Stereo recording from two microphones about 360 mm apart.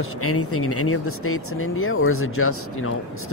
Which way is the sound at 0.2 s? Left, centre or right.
Left.